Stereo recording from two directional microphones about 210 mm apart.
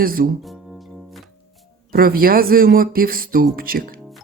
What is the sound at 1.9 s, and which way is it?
Speech, 45° right (ahead or behind).